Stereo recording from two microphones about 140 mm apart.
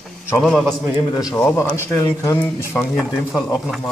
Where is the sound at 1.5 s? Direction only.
20° left (ahead or behind).